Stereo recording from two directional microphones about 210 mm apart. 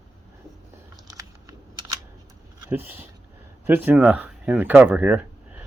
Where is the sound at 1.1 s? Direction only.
15° right (ahead or behind).